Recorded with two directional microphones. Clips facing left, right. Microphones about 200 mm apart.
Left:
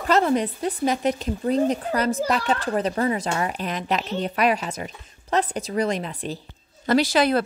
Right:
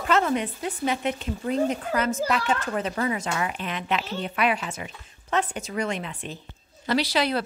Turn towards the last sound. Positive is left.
turn(degrees=50)  # may be behind; listen again after turning